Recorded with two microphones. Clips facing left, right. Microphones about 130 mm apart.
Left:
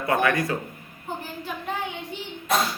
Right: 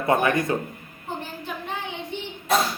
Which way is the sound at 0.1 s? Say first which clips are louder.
Right 2 dB; 25° right (ahead or behind).